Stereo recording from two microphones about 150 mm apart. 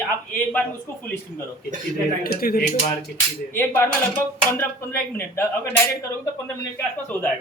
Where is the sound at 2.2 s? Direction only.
75° left (ahead or behind).